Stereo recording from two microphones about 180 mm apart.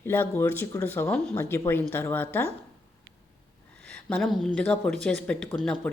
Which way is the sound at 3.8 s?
5° left (ahead or behind).